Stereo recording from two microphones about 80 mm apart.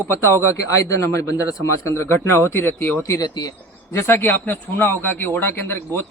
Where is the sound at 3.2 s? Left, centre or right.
Left.